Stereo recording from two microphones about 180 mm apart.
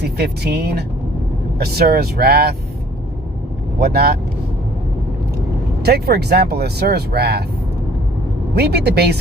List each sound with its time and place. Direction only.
0.0 s speech: 65° right (ahead or behind)
3.8 s speech: 60° right (ahead or behind)
5.8 s speech: 65° right (ahead or behind)
8.5 s speech: 60° right (ahead or behind)